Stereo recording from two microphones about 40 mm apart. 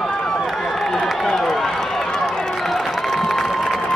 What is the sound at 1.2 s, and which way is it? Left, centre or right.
Run, centre.